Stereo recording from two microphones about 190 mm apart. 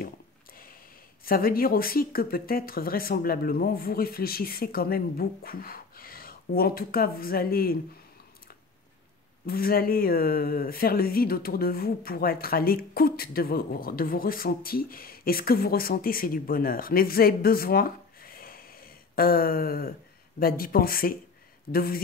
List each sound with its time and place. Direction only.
1.2 s speech: 50° left (ahead or behind)
9.5 s speech: 50° left (ahead or behind)